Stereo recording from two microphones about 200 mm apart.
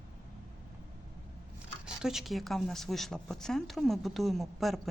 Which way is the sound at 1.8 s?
5° right (ahead or behind).